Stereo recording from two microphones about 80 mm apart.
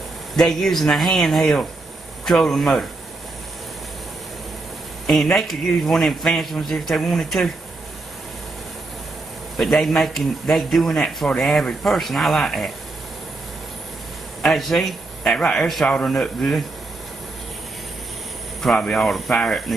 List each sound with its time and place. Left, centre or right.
0.4 s a man's voice: centre
5.0 s a man's voice: centre
9.6 s a man's voice: centre
14.4 s speech: centre
18.6 s speech: centre